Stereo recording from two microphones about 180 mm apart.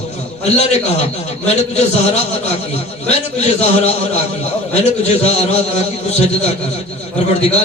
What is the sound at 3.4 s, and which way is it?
A man's voice, 35° left (ahead or behind).